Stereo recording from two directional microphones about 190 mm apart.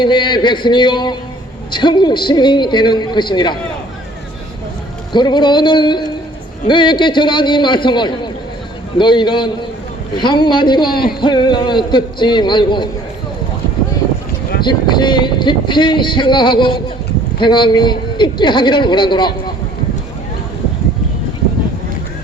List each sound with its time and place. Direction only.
0.0 s speech: 25° left (ahead or behind)
5.1 s speech: 25° left (ahead or behind)
14.6 s speech: 25° left (ahead or behind)